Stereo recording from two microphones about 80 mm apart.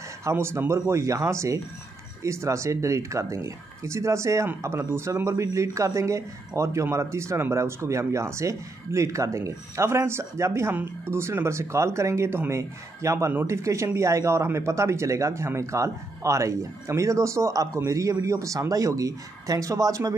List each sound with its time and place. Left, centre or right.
0.2 s speech: right